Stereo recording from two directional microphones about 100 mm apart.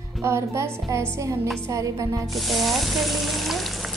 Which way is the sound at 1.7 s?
35° right (ahead or behind).